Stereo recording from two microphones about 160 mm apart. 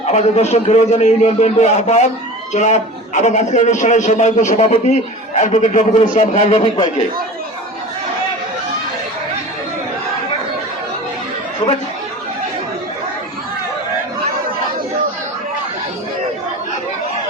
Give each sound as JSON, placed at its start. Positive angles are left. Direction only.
{"t": 0.0, "sound": "a man's voice", "side_deg": 40}